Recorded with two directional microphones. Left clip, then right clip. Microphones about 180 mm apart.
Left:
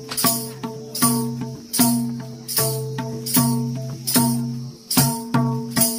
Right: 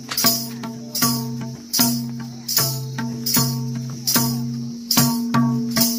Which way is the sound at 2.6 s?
25° right (ahead or behind).